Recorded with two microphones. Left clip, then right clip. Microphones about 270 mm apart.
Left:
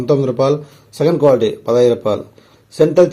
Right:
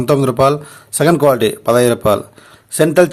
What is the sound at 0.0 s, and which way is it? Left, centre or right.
A man's voice, right.